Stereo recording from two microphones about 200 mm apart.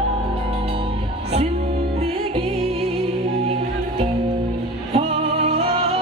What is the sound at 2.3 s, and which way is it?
Music, 30° right (ahead or behind).